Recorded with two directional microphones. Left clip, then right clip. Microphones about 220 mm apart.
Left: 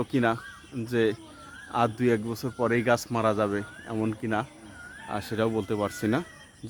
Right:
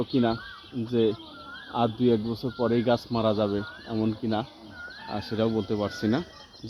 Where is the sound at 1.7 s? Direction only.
5° left (ahead or behind).